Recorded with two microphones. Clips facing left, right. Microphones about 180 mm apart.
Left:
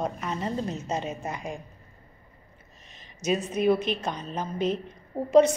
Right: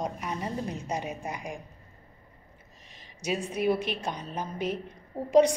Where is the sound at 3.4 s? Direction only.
10° right (ahead or behind).